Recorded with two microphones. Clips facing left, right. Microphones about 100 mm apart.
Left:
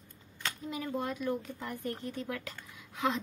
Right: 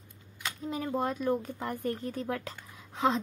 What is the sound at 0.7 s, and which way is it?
Speech, 40° right (ahead or behind).